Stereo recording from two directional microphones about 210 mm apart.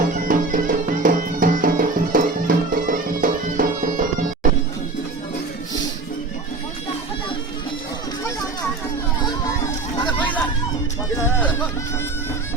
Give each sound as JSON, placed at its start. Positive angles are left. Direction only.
{"t": 0.1, "sound": "music", "side_deg": -40}